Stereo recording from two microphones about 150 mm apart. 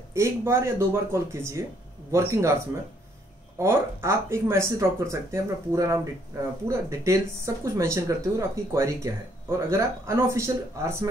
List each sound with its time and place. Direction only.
0.1 s speech: 20° right (ahead or behind)